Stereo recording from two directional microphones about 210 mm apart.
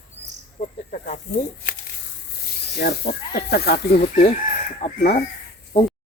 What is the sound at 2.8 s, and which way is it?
Speech, 55° left (ahead or behind).